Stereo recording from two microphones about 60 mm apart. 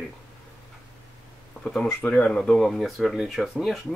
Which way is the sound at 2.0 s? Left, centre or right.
Centre.